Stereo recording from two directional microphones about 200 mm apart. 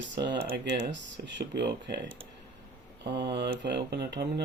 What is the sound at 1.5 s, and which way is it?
Speech, 55° right (ahead or behind).